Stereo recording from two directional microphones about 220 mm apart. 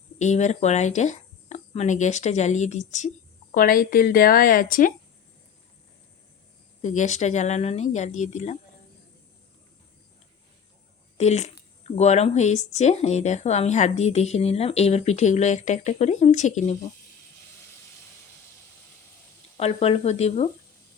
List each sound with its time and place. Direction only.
0.2 s speech: 30° left (ahead or behind)
6.8 s speech: 35° left (ahead or behind)
11.2 s speech: 30° left (ahead or behind)
19.5 s speech: 25° left (ahead or behind)